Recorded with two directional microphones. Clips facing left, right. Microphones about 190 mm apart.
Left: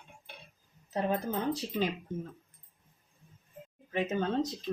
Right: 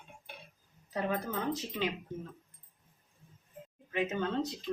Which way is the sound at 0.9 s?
30° left (ahead or behind).